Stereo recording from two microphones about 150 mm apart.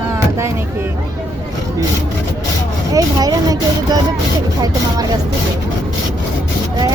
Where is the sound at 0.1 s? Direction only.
20° right (ahead or behind).